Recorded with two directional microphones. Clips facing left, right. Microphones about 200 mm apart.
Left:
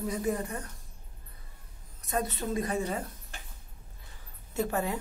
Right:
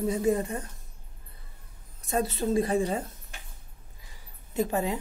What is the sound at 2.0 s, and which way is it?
Speech, 25° right (ahead or behind).